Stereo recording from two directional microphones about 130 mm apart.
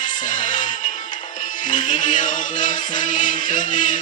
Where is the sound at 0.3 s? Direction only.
75° left (ahead or behind).